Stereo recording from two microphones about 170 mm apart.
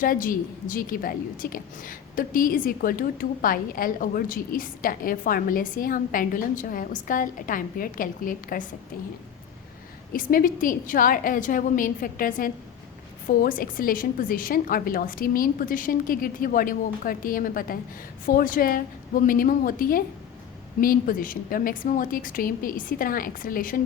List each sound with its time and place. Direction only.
0.0 s a woman's voice: 55° left (ahead or behind)
10.1 s a woman's voice: 55° left (ahead or behind)